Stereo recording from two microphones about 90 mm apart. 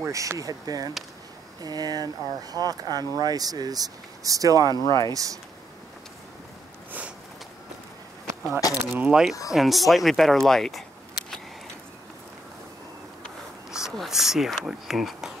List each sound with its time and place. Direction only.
0.0 s speech: 35° right (ahead or behind)
4.8 s speech: 40° left (ahead or behind)
5.1 s speech: 40° right (ahead or behind)
8.5 s speech: 40° left (ahead or behind)
9.0 s speech: 5° right (ahead or behind)
11.2 s a sound: 5° left (ahead or behind)
13.7 s speech: 5° right (ahead or behind)